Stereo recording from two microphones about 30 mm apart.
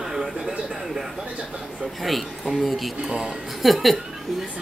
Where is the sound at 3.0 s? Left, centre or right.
Right.